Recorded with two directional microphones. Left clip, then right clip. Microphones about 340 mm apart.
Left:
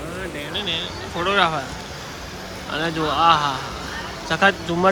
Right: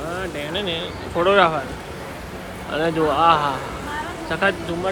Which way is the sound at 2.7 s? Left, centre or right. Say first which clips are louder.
Right 3 dB; centre.